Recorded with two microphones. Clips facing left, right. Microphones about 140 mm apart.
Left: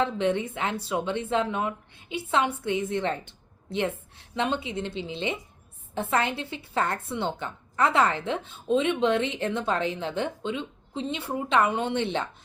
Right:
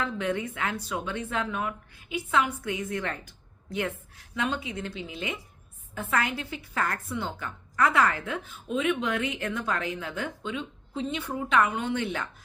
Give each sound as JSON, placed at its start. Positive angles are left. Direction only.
{"t": 0.0, "sound": "a woman's voice", "side_deg": 25}